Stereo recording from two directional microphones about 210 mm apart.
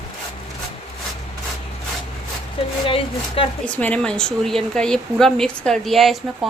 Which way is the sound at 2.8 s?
25° left (ahead or behind).